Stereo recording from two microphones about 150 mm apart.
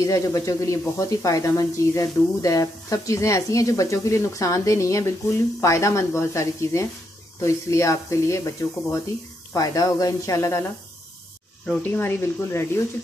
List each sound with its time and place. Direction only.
0.0 s speech: 20° left (ahead or behind)
11.6 s speech: 5° left (ahead or behind)
11.9 s speech: 15° left (ahead or behind)